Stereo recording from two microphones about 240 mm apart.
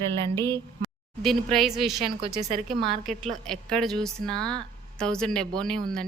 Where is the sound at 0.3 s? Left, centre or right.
Centre.